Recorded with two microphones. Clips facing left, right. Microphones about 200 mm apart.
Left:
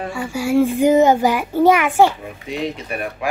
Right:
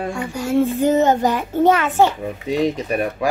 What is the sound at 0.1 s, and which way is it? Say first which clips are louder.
A child's voice: left 3 dB; 5° left (ahead or behind).